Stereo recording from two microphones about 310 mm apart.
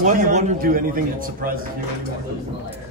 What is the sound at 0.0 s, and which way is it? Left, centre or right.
A man's voice, right.